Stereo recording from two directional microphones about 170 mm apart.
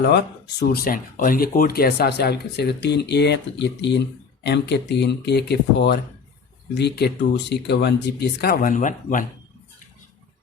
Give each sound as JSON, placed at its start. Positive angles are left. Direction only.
{"t": 0.7, "sound": "speech", "side_deg": 60}